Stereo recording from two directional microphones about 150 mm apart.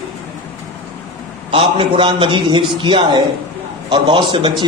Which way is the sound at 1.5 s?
35° right (ahead or behind).